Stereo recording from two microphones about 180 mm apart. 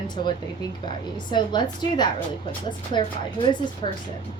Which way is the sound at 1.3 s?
25° left (ahead or behind).